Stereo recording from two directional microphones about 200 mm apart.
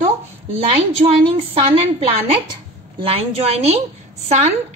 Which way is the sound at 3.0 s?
30° right (ahead or behind).